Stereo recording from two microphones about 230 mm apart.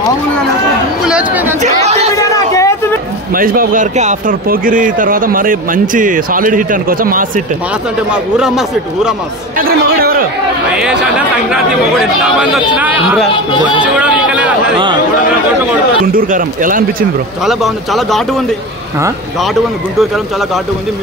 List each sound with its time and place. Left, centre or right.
1.0 s speech: centre
1.6 s speech: right
2.1 s a sound: centre
3.3 s speech: right
8.1 s speech: centre
9.6 s a man's voice: right
10.8 s speech: centre
13.3 s speech: left
13.9 s speech: centre
16.1 s speech: right
17.5 s speech: centre